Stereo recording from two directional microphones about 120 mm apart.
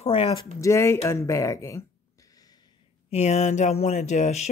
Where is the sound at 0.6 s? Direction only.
25° left (ahead or behind).